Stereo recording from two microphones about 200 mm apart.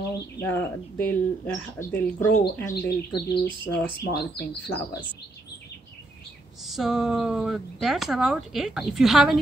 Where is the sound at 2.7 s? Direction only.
55° left (ahead or behind).